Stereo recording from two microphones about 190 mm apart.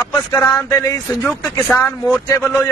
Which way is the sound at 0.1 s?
15° left (ahead or behind).